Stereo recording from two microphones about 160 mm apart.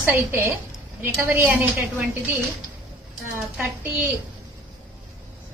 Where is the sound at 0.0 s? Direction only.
15° right (ahead or behind).